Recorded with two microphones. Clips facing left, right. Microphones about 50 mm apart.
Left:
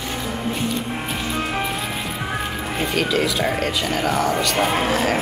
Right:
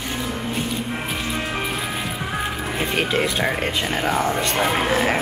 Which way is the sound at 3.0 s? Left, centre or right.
Right.